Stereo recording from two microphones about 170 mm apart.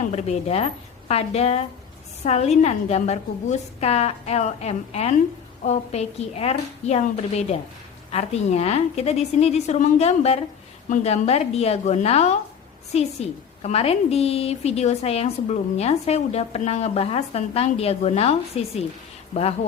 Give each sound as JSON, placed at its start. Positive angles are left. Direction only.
{"t": 0.1, "sound": "a woman's voice", "side_deg": 40}